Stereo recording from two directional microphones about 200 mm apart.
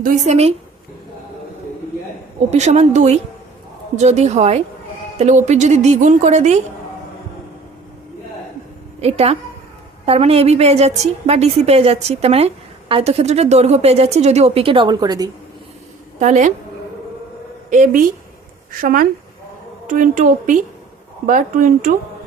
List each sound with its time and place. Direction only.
0.0 s a woman's voice: 30° right (ahead or behind)
2.5 s a woman's voice: 35° right (ahead or behind)
9.0 s a woman's voice: 30° right (ahead or behind)
16.2 s a woman's voice: 35° right (ahead or behind)
17.7 s a woman's voice: 40° right (ahead or behind)